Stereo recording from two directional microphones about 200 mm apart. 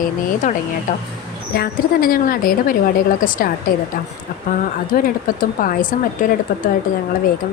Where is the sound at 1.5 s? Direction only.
50° left (ahead or behind).